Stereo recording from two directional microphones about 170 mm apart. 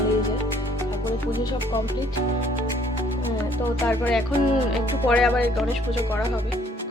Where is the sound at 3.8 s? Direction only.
10° left (ahead or behind).